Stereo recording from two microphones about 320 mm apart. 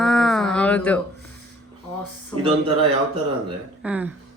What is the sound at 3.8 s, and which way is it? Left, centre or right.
Speech, centre.